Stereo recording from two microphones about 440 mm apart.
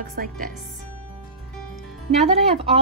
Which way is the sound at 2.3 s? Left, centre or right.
Centre.